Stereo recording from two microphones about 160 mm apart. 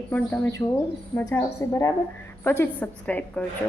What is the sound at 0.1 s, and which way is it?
A woman's voice, 10° left (ahead or behind).